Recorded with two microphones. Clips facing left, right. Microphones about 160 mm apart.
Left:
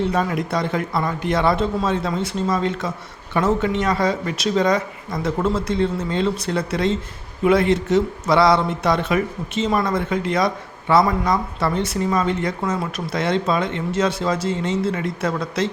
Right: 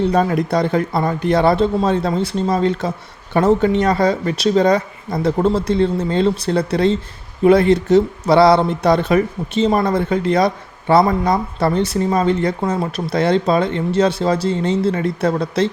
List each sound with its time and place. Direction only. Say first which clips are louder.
0.1 s speech: right 5 dB; 35° right (ahead or behind)